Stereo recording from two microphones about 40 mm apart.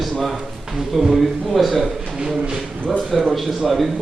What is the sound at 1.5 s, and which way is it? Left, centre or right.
Speech, centre.